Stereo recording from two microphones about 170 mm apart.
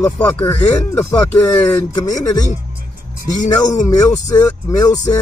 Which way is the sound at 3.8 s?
20° left (ahead or behind).